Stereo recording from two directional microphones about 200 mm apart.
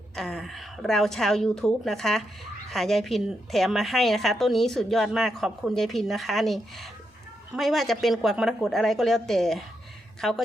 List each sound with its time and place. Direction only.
0.2 s a woman's voice: centre (ahead or behind)